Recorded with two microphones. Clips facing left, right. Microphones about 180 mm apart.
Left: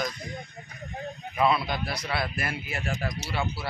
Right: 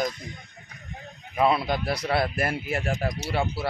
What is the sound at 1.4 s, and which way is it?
Speech, 45° right (ahead or behind).